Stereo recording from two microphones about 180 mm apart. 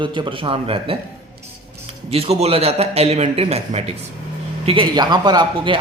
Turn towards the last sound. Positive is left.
turn(degrees=-25)  # may be behind; listen again after turning